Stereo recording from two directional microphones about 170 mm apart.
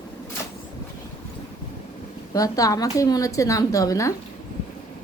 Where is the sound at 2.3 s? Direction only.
20° left (ahead or behind).